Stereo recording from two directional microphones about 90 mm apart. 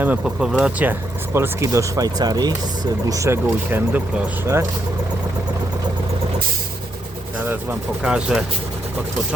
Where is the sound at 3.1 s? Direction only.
30° right (ahead or behind).